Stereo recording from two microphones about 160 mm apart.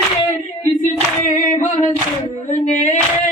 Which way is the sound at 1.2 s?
55° left (ahead or behind).